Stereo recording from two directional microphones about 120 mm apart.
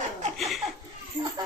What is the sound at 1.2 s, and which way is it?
Children playing, 45° right (ahead or behind).